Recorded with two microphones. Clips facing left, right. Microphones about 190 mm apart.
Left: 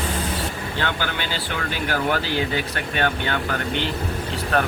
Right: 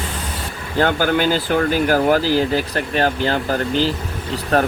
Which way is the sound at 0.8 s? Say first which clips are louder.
Right 11 dB; 45° right (ahead or behind).